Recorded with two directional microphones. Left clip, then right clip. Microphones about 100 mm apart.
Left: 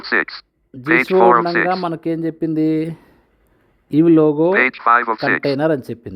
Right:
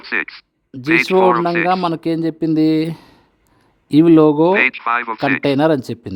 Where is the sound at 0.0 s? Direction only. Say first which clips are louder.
Left 3 dB; centre (ahead or behind).